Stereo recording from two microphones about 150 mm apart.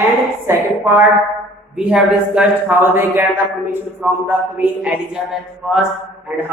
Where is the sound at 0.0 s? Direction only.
15° right (ahead or behind).